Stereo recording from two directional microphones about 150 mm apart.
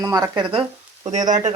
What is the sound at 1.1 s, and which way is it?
Speech, 55° right (ahead or behind).